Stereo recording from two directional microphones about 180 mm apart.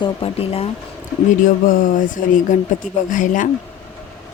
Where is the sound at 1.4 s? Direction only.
50° left (ahead or behind).